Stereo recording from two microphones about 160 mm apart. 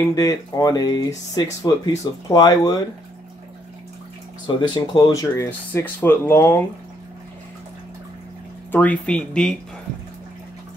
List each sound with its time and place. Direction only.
0.1 s speech: 20° left (ahead or behind)
4.6 s speech: 25° left (ahead or behind)
8.7 s speech: 10° left (ahead or behind)